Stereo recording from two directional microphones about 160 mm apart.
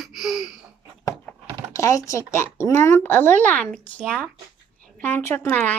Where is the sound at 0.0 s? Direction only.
Centre (ahead or behind).